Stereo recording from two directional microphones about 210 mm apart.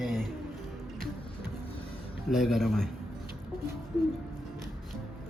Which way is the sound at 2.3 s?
Centre (ahead or behind).